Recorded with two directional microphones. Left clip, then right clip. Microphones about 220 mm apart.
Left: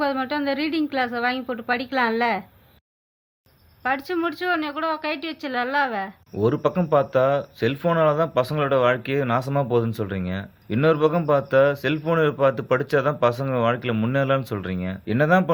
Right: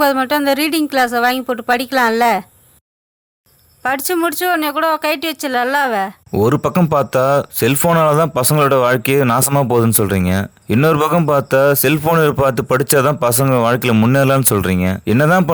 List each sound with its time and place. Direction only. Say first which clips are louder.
0.0 s speech: right 10 dB; 40° right (ahead or behind)
3.8 s speech: right 7 dB; 45° right (ahead or behind)